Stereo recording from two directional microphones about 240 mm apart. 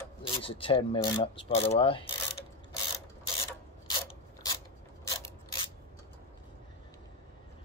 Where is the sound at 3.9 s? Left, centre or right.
Centre.